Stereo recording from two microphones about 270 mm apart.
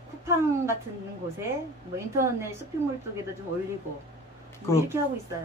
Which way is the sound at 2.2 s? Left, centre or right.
Centre.